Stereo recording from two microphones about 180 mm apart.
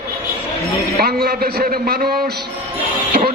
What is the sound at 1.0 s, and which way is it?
A man's voice, 55° right (ahead or behind).